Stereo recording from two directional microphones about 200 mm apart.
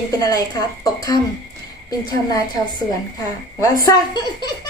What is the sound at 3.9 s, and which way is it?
Speech, 20° left (ahead or behind).